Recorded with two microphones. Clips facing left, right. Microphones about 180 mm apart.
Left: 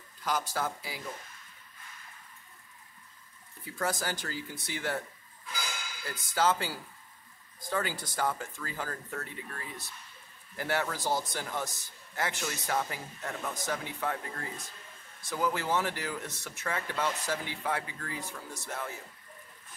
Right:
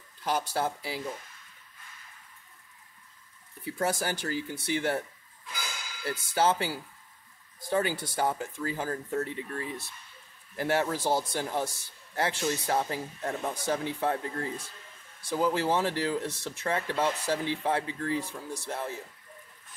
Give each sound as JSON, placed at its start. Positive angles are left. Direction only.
{"t": 0.2, "sound": "speech", "side_deg": -25}
{"t": 3.6, "sound": "speech", "side_deg": -20}
{"t": 6.0, "sound": "speech", "side_deg": -25}
{"t": 7.7, "sound": "speech", "side_deg": -20}